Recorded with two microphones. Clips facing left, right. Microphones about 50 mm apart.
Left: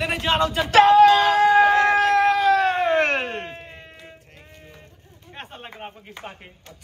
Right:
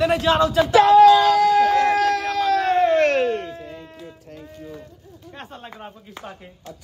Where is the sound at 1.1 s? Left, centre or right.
Left.